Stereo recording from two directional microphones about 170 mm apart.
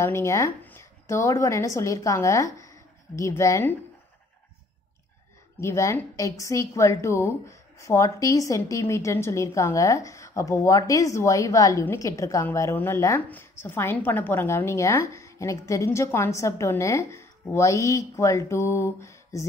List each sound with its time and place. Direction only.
0.0 s speech: 15° left (ahead or behind)
5.6 s a woman's voice: 15° left (ahead or behind)